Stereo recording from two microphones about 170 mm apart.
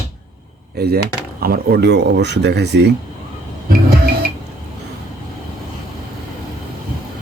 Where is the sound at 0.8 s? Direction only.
70° right (ahead or behind).